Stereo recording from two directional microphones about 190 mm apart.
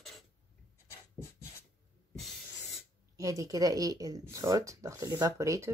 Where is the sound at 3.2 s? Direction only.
20° right (ahead or behind).